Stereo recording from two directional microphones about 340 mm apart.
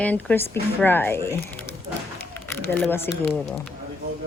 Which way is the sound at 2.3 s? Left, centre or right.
Centre.